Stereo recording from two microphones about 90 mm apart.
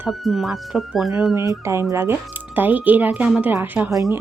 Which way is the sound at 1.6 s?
30° right (ahead or behind).